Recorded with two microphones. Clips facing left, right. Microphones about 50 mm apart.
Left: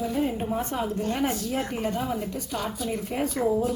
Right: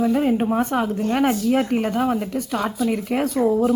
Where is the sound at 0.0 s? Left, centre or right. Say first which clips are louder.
Right 8 dB; right.